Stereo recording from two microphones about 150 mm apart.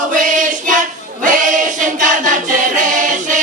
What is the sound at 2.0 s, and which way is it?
Music, 60° right (ahead or behind).